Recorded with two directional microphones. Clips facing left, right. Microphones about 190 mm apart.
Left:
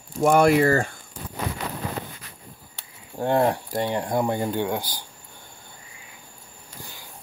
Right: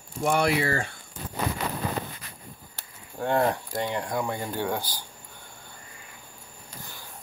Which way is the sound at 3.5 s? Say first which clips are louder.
Left 4 dB; 35° left (ahead or behind).